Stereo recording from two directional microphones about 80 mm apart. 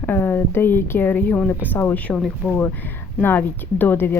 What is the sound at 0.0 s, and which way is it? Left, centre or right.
Speech, left.